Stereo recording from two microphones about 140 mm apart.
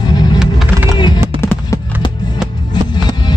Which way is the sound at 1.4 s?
15° left (ahead or behind).